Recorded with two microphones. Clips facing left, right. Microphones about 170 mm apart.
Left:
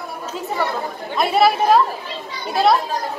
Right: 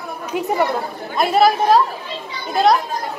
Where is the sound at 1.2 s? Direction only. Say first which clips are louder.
Right 1 dB; centre (ahead or behind).